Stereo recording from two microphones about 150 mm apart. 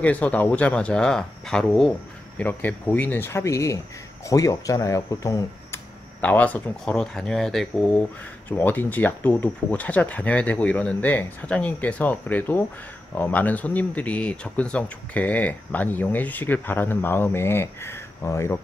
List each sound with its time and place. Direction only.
0.0 s speech: 10° left (ahead or behind)
6.2 s speech: 10° left (ahead or behind)